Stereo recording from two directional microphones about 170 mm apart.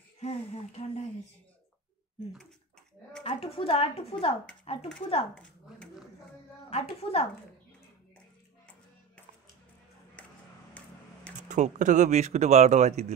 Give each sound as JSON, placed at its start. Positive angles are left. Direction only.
{"t": 0.2, "sound": "a woman's voice", "side_deg": 40}
{"t": 3.3, "sound": "a woman's voice", "side_deg": 35}
{"t": 5.3, "sound": "a sound", "side_deg": 5}
{"t": 6.7, "sound": "a woman's voice", "side_deg": 35}
{"t": 11.4, "sound": "speech", "side_deg": -45}